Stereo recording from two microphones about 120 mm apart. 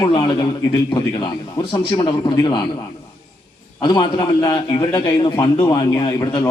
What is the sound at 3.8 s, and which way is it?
A man's voice, 40° left (ahead or behind).